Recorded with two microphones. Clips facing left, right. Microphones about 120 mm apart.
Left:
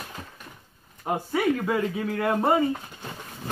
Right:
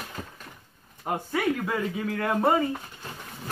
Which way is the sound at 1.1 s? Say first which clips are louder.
Left 2 dB; 5° left (ahead or behind).